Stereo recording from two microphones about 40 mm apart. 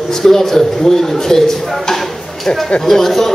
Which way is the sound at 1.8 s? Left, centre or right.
Centre.